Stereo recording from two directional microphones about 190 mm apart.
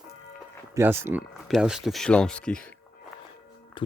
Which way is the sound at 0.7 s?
10° right (ahead or behind).